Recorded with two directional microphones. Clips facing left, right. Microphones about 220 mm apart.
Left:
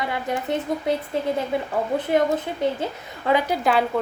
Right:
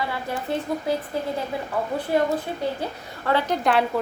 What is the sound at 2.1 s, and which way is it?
A child's voice, 20° left (ahead or behind).